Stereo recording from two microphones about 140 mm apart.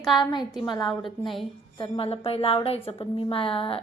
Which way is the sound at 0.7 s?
35° left (ahead or behind).